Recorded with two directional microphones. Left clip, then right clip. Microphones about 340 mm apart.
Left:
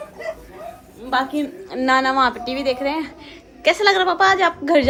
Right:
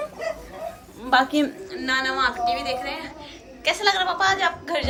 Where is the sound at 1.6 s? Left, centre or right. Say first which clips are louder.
Left 7 dB; centre.